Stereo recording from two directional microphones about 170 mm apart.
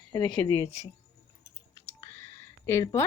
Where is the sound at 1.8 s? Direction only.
15° left (ahead or behind).